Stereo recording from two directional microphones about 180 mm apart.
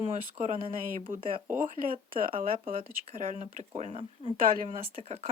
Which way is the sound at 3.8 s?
35° right (ahead or behind).